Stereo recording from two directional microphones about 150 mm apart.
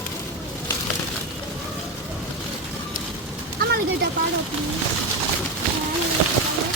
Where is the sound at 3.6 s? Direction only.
80° right.